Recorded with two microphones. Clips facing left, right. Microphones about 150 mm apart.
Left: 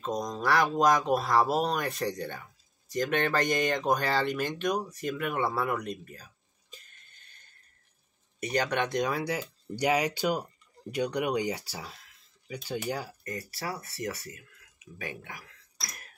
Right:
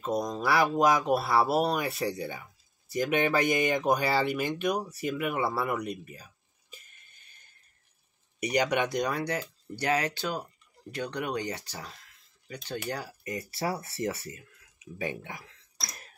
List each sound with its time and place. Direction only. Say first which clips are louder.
0.0 s speech: right 2 dB; 5° right (ahead or behind)
8.4 s speech: right 2 dB; 15° right (ahead or behind); by 13.1 s 10° left (ahead or behind)
13.2 s speech: right 4 dB; 20° right (ahead or behind)